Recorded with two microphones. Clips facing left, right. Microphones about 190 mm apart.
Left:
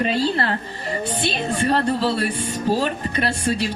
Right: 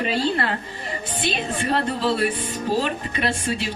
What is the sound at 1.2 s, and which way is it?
Speech, 35° left (ahead or behind).